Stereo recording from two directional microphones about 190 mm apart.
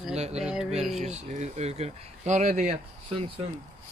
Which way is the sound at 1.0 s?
35° right (ahead or behind).